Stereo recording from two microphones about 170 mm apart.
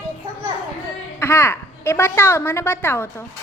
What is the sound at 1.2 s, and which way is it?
A woman's voice, 15° left (ahead or behind).